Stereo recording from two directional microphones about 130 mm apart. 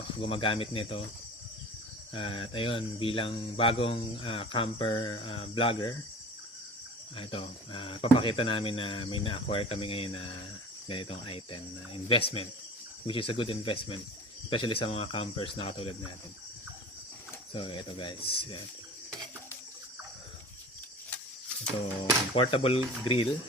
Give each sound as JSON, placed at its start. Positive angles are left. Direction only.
{"t": 0.2, "sound": "speech", "side_deg": 45}
{"t": 2.1, "sound": "speech", "side_deg": 40}
{"t": 7.2, "sound": "speech", "side_deg": 45}
{"t": 17.5, "sound": "speech", "side_deg": 40}
{"t": 22.4, "sound": "speech", "side_deg": 45}